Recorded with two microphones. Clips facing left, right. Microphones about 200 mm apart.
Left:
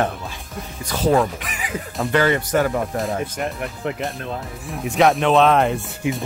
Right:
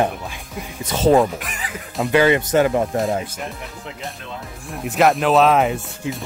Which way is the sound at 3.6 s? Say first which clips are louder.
Left 8 dB; 60° left (ahead or behind).